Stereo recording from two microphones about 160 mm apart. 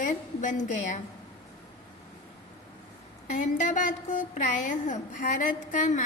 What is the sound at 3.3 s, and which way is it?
A woman's voice, 50° left (ahead or behind).